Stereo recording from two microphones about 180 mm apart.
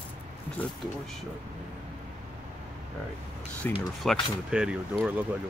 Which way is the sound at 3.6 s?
10° left (ahead or behind).